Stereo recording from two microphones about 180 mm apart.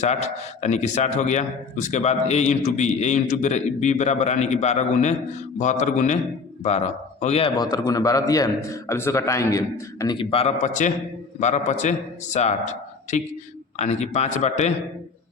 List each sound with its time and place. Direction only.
0.0 s a man's voice: 40° left (ahead or behind); by 10.2 s 15° left (ahead or behind)
10.2 s a man's voice: 30° left (ahead or behind)